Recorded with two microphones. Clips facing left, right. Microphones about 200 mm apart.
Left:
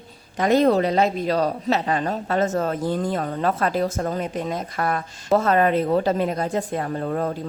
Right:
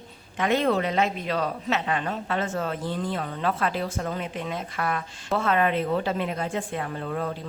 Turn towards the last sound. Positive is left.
turn(degrees=45)  # may be behind; listen again after turning